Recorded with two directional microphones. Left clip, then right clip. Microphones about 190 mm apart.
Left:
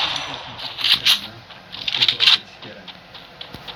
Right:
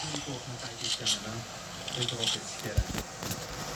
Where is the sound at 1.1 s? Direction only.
50° left (ahead or behind).